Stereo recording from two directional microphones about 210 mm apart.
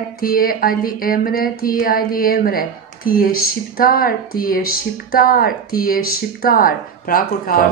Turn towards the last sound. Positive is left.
turn(degrees=45)  # may be behind; listen again after turning